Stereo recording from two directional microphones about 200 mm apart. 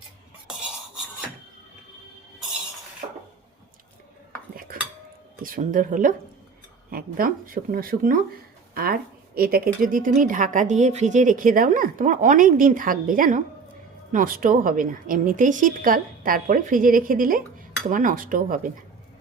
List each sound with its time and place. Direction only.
4.7 s cutlery: 45° right (ahead or behind)
5.4 s a woman's voice: 45° right (ahead or behind)